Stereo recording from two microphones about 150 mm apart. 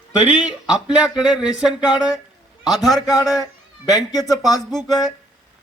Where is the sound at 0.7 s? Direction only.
5° right (ahead or behind).